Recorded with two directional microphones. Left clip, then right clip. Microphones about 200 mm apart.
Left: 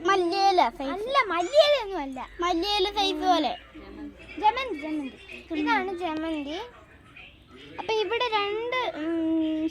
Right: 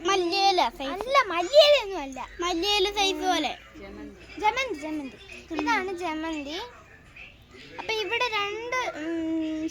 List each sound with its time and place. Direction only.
0.0 s a sound: 30° left (ahead or behind)
1.0 s a child's voice: 25° left (ahead or behind)
7.8 s a child's voice: 30° left (ahead or behind)